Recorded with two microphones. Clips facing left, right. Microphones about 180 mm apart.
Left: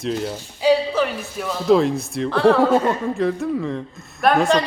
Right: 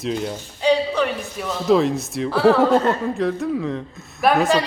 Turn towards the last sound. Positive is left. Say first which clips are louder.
# even
turn(degrees=-5)  # may be behind; listen again after turning